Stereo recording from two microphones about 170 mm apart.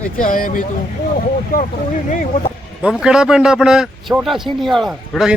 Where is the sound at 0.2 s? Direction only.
55° left (ahead or behind).